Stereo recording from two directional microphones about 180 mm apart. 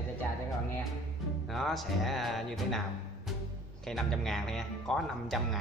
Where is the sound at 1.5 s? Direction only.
Centre (ahead or behind).